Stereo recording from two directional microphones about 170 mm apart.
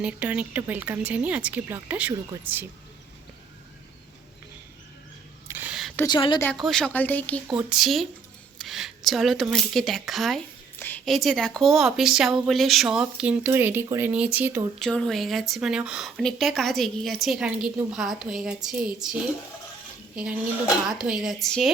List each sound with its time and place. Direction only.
0.0 s speech: 10° right (ahead or behind)
5.5 s a sound: 10° right (ahead or behind)
6.1 s speech: 25° left (ahead or behind)
6.6 s speech: 5° left (ahead or behind)
10.8 s a sound: 10° left (ahead or behind)
11.0 s speech: centre (ahead or behind)
14.8 s speech: 5° left (ahead or behind)
20.1 s speech: 5° right (ahead or behind)